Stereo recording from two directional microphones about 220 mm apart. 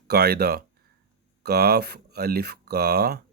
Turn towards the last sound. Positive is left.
turn(degrees=-45)  # may be behind; listen again after turning